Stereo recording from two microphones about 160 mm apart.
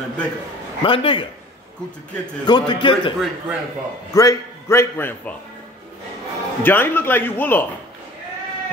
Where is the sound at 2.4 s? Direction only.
30° left (ahead or behind).